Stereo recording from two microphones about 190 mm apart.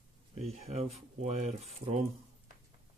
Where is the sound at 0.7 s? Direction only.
35° right (ahead or behind).